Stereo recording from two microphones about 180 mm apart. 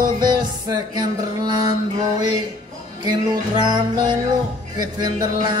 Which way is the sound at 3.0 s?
25° right (ahead or behind).